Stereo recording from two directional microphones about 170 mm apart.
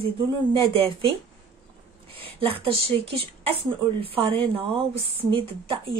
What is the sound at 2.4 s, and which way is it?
Speech, 35° right (ahead or behind).